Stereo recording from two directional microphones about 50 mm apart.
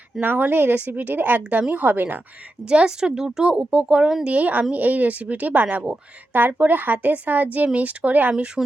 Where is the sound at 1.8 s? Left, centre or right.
Right.